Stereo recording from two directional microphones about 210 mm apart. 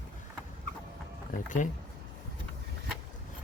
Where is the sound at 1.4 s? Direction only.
35° left (ahead or behind).